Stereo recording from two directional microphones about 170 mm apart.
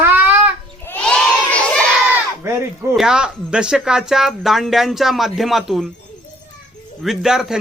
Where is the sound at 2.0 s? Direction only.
15° right (ahead or behind).